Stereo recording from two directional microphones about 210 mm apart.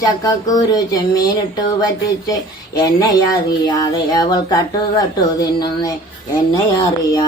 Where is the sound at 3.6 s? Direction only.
20° left (ahead or behind).